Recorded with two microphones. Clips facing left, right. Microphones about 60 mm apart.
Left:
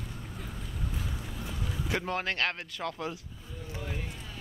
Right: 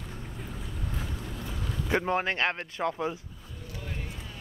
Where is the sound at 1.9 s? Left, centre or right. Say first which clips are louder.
Right 5 dB; right.